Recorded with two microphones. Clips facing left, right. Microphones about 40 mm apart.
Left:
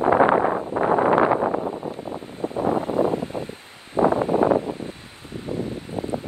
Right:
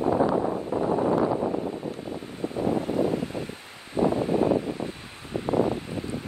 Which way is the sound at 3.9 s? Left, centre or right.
Left.